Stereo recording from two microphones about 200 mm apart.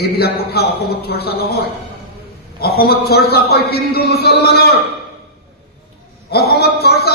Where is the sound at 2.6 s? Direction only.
50° left (ahead or behind).